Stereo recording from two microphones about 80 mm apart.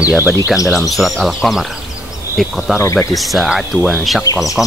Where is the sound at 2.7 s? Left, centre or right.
Left.